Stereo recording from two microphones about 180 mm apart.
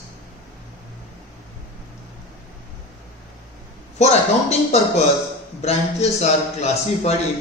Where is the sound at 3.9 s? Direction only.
35° left (ahead or behind).